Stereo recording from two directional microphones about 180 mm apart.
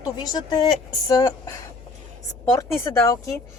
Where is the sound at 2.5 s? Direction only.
15° left (ahead or behind).